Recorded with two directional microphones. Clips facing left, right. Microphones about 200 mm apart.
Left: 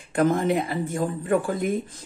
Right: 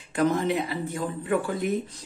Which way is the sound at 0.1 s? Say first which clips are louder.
Left 3 dB; 50° left (ahead or behind).